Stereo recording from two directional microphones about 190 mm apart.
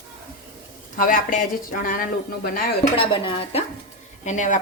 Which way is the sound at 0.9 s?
45° left (ahead or behind).